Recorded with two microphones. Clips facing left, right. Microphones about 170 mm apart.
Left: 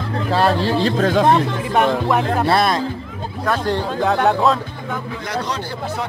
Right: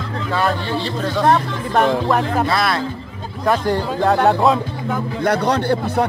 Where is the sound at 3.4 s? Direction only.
10° right (ahead or behind).